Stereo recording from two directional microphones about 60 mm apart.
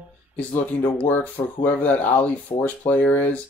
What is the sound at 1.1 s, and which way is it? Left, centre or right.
Speech, left.